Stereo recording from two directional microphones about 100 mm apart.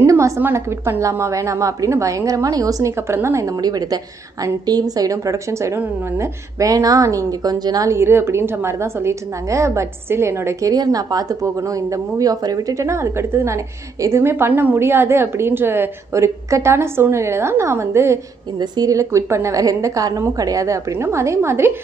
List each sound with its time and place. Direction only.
0.0 s a woman's voice: 30° right (ahead or behind)
10.7 s a woman's voice: 40° right (ahead or behind); by 21.7 s 25° right (ahead or behind)